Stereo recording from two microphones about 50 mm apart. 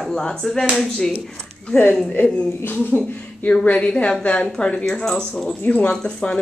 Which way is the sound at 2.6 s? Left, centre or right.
Left.